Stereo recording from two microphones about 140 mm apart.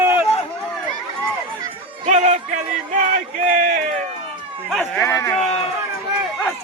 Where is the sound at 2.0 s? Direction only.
55° right (ahead or behind).